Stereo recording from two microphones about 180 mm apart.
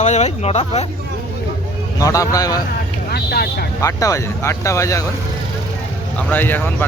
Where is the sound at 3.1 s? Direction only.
60° left (ahead or behind).